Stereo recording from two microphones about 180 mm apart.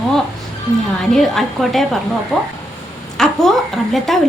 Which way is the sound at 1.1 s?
Centre (ahead or behind).